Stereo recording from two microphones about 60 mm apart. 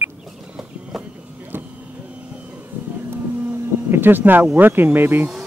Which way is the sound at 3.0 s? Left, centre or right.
Right.